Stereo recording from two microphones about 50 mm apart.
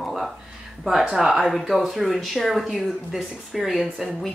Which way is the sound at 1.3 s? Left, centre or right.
Centre.